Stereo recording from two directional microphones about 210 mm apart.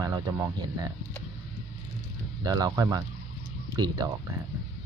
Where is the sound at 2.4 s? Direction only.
20° right (ahead or behind).